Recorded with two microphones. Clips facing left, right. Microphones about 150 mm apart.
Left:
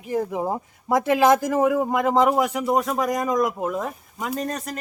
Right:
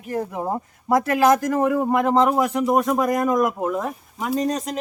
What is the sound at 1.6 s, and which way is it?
Speech, 10° left (ahead or behind).